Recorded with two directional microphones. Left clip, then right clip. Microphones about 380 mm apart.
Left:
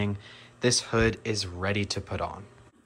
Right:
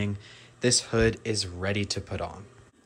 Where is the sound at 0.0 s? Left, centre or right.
Centre.